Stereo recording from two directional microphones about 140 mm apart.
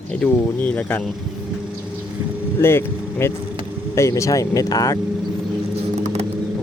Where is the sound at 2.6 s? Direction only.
15° left (ahead or behind).